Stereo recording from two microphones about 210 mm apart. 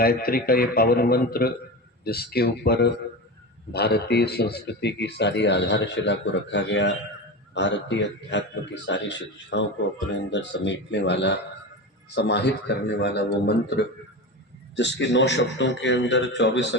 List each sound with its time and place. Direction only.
0.0 s a man's voice: 45° left (ahead or behind)